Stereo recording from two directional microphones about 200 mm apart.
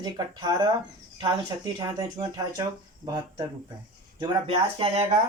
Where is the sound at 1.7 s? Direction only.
20° right (ahead or behind).